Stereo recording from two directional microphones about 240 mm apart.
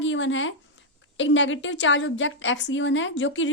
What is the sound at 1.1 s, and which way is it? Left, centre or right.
A woman's voice, left.